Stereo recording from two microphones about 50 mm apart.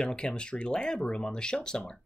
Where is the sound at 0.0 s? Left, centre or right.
Centre.